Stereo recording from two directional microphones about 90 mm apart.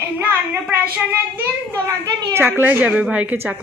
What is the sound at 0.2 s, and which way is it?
Speech, 20° right (ahead or behind).